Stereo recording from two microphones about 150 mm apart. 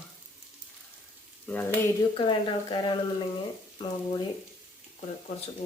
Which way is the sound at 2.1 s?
30° left (ahead or behind).